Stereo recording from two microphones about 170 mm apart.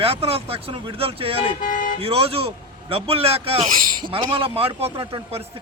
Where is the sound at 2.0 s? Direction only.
35° right (ahead or behind).